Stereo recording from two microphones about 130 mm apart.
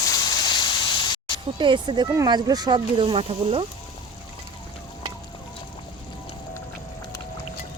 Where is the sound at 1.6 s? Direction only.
35° right (ahead or behind).